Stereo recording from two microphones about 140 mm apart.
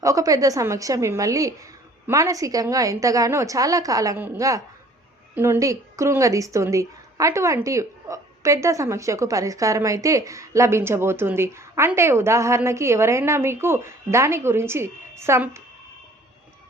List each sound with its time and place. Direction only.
0.0 s speech: 25° right (ahead or behind)